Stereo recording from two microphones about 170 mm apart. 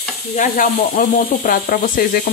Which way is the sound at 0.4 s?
55° left (ahead or behind).